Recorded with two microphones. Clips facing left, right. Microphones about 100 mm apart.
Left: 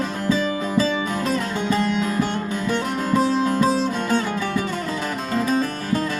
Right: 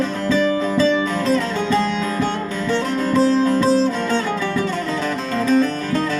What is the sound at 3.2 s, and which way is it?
Music, 15° left (ahead or behind).